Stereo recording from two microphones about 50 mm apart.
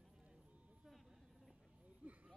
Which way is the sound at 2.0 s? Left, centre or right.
Right.